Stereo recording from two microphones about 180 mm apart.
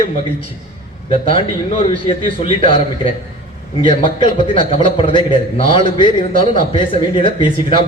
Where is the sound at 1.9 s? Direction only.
30° left (ahead or behind).